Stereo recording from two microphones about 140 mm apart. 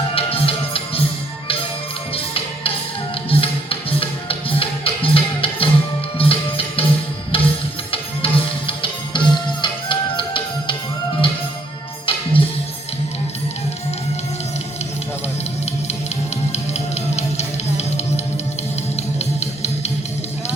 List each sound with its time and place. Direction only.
0.1 s music: 40° left (ahead or behind)
2.1 s music: 40° left (ahead or behind)
12.0 s music: 40° left (ahead or behind)
16.5 s music: 50° left (ahead or behind)